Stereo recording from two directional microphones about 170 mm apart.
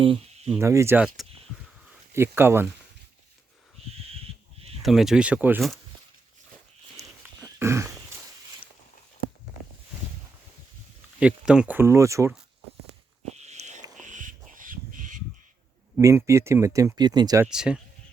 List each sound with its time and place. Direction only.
0.0 s a sound: 30° right (ahead or behind)
0.6 s speech: 15° right (ahead or behind)
1.0 s speech: centre (ahead or behind)
2.1 s speech: 15° right (ahead or behind)
4.8 s speech: centre (ahead or behind)
7.0 s a sound: 20° right (ahead or behind)
11.2 s speech: 5° right (ahead or behind)
13.3 s a sound: 40° right (ahead or behind)
14.0 s crow: 50° right (ahead or behind)
16.0 s speech: 20° right (ahead or behind)
17.4 s speech: 5° right (ahead or behind)